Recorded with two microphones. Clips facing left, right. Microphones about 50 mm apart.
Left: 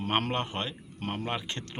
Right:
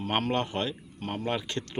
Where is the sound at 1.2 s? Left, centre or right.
Left.